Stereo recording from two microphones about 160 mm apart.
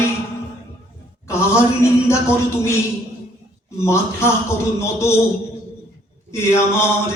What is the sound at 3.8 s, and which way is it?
Music, 15° left (ahead or behind).